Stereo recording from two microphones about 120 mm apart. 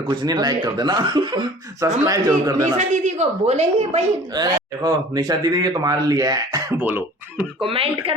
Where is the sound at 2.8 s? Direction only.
75° right (ahead or behind).